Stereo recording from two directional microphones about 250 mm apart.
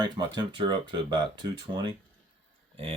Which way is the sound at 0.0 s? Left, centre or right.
Centre.